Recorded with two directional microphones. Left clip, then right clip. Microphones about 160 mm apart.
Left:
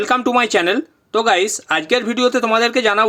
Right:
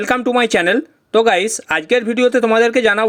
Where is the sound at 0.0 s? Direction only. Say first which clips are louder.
Even; 30° right (ahead or behind).